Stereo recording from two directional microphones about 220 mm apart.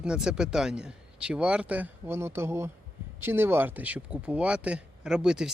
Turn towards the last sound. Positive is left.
turn(degrees=-5)  # may be behind; listen again after turning